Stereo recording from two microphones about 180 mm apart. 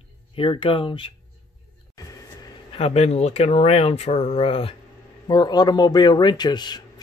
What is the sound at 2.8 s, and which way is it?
A man's voice, 35° left (ahead or behind).